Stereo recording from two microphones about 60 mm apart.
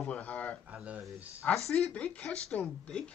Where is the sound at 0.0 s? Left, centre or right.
Left.